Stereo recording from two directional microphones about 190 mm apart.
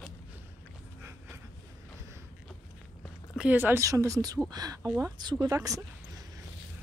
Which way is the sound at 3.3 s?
5° right (ahead or behind).